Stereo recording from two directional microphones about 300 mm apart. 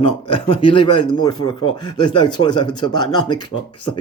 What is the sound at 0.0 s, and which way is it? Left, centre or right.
Speech, centre.